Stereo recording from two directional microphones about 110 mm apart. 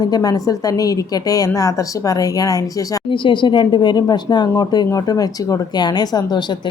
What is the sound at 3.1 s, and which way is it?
A woman's voice, 50° left (ahead or behind).